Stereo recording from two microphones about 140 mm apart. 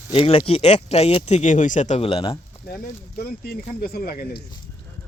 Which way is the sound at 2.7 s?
90° left.